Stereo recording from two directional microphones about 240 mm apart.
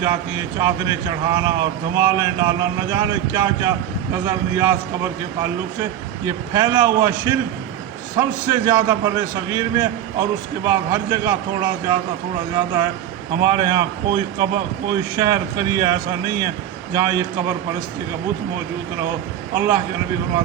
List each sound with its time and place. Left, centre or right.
0.0 s speech: centre
6.2 s speech: centre
19.5 s speech: centre